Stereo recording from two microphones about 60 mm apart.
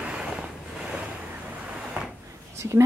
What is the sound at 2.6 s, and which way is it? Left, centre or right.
Speech, right.